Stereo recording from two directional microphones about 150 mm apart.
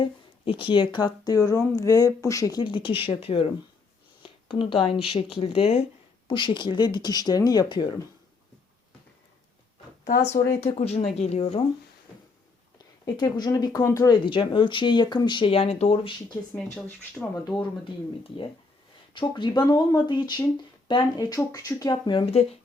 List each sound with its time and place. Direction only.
0.0 s speech: 35° left (ahead or behind)
10.0 s speech: 90° left
10.6 s speech: 45° left (ahead or behind)
13.1 s speech: 25° left (ahead or behind)
16.6 s speech: 5° left (ahead or behind)
17.4 s speech: 30° left (ahead or behind)
19.1 s speech: 35° left (ahead or behind)